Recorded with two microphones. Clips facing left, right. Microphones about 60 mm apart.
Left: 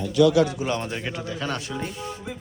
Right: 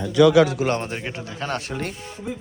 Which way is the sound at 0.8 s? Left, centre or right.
Right.